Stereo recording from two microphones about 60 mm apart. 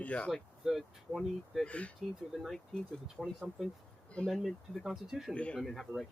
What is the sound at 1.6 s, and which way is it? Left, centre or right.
Speech, left.